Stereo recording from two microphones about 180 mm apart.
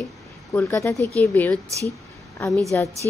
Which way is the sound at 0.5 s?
15° left (ahead or behind).